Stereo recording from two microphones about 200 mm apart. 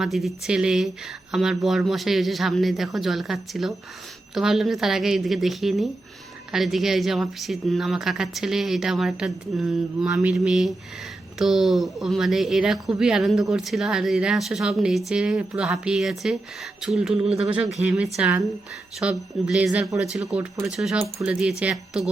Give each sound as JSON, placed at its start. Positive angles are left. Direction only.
{"t": 0.0, "sound": "speech", "side_deg": 0}
{"t": 17.2, "sound": "speech", "side_deg": -30}
{"t": 17.8, "sound": "speech", "side_deg": -5}